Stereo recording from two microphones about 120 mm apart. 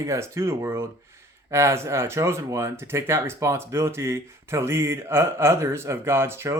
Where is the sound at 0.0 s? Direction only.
25° right (ahead or behind).